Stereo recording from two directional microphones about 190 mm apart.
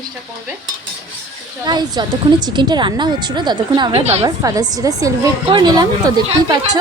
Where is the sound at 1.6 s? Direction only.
20° right (ahead or behind).